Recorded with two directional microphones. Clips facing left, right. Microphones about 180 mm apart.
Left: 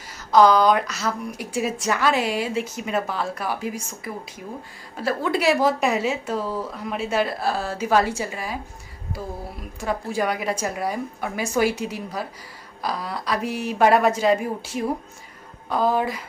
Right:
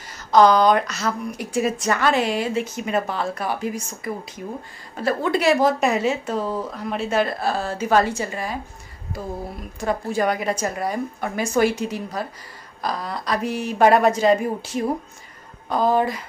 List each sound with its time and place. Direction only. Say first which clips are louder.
0.3 s a woman's voice: right 1 dB; 5° left (ahead or behind)
6.4 s speech: right 2 dB; 20° right (ahead or behind)
6.9 s a woman's voice: right 2 dB; 5° left (ahead or behind)
9.8 s a woman's voice: right 2 dB; 5° left (ahead or behind)